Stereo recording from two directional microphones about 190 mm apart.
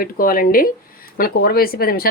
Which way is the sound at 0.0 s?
50° left (ahead or behind).